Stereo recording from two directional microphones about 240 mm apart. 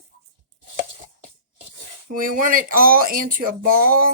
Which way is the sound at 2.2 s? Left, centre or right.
Right.